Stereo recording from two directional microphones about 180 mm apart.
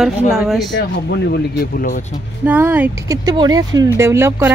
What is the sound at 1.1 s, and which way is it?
Speech, 60° left (ahead or behind).